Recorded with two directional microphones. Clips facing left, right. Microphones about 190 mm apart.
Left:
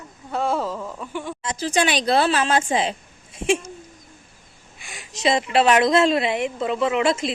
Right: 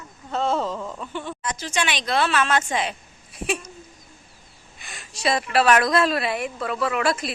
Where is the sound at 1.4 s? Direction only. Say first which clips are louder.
Left 6 dB; 35° left (ahead or behind).